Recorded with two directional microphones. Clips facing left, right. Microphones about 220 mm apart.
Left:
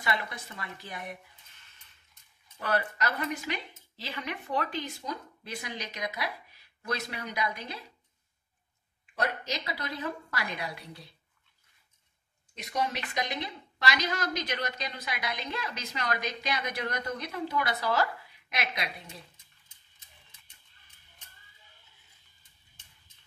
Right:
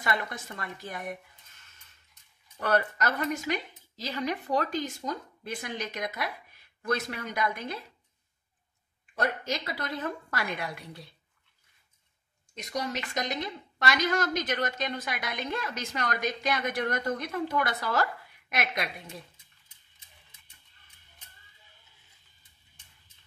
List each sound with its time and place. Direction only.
0.0 s a woman's voice: 45° right (ahead or behind)
2.6 s a woman's voice: 45° right (ahead or behind)
9.1 s a woman's voice: 45° right (ahead or behind)
12.5 s a woman's voice: 45° right (ahead or behind)